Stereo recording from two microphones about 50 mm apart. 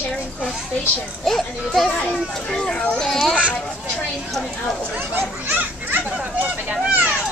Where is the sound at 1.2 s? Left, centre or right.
Centre.